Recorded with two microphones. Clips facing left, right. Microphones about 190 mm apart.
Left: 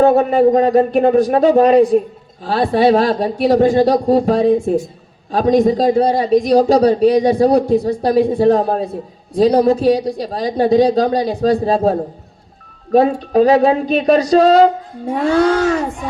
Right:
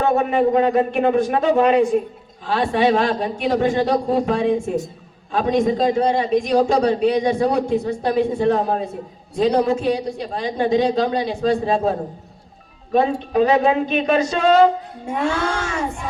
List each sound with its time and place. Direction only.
0.0 s a man's voice: 35° left (ahead or behind)